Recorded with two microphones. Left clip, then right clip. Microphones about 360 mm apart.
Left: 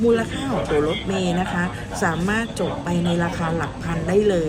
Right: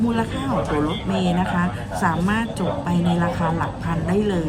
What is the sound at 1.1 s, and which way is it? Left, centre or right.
Speech, left.